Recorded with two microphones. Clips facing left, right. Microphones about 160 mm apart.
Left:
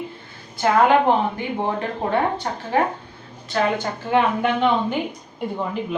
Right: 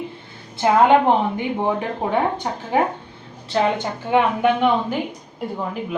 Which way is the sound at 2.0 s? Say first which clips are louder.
Even; 15° right (ahead or behind).